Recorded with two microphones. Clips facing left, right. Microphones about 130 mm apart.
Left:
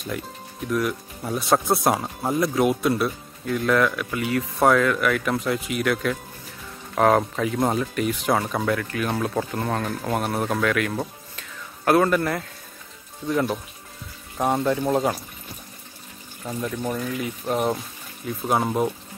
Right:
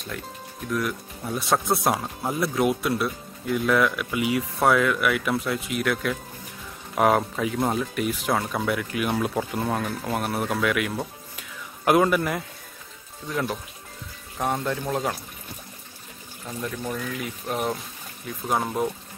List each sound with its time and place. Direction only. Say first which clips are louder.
0.7 s speech: left 3 dB; centre (ahead or behind)
8.6 s speech: left 1 dB; 10° right (ahead or behind)
13.3 s speech: left 5 dB; centre (ahead or behind)
16.4 s speech: left 4 dB; 10° left (ahead or behind)